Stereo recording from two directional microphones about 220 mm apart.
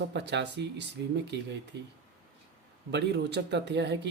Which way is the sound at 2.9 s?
50° right (ahead or behind).